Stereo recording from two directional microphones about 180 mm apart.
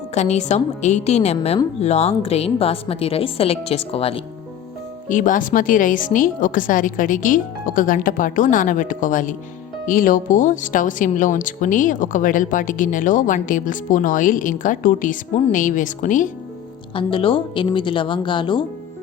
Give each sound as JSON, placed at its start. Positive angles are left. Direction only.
{"t": 0.1, "sound": "a woman's voice", "side_deg": 40}
{"t": 5.0, "sound": "speech", "side_deg": 45}
{"t": 16.9, "sound": "speech", "side_deg": 30}